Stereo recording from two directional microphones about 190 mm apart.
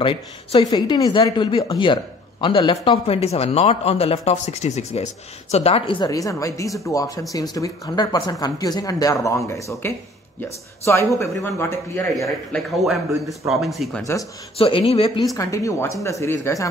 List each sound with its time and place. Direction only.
0.0 s a man's voice: 25° left (ahead or behind)
11.1 s speech: 15° left (ahead or behind)
12.2 s a man's voice: centre (ahead or behind)
14.6 s a man's voice: 30° left (ahead or behind)
15.3 s speech: 15° left (ahead or behind)